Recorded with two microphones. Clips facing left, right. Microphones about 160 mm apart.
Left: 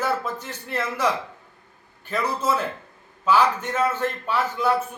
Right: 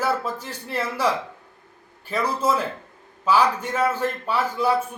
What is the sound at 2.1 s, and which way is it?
Speech, 10° right (ahead or behind).